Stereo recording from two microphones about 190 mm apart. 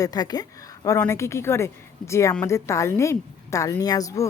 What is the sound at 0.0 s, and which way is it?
A woman's voice, 20° left (ahead or behind).